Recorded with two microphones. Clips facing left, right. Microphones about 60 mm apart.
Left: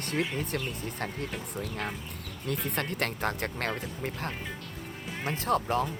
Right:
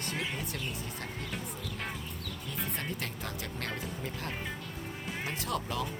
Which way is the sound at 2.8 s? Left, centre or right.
Left.